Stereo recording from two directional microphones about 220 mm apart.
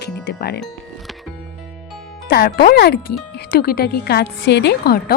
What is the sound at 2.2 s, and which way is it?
Speech, 45° left (ahead or behind).